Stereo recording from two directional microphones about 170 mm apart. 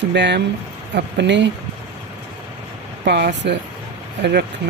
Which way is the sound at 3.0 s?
75° right (ahead or behind).